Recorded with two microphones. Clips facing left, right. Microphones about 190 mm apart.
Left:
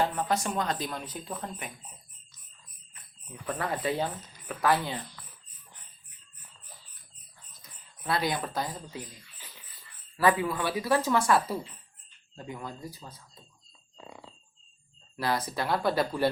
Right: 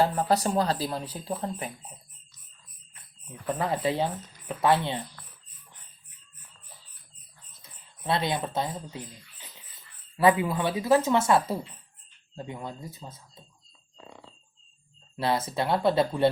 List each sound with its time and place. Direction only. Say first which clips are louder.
0.0 s speech: right 4 dB; 35° right (ahead or behind)
3.4 s speech: right 4 dB; 25° right (ahead or behind)
5.2 s dog: even; centre (ahead or behind)
8.0 s speech: right 2 dB; 25° right (ahead or behind)
10.2 s speech: right 3 dB; 20° right (ahead or behind)
15.1 s speech: right 3 dB; 25° right (ahead or behind)